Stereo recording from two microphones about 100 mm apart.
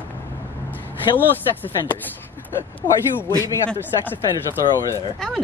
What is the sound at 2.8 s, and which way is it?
Speech, 45° left (ahead or behind).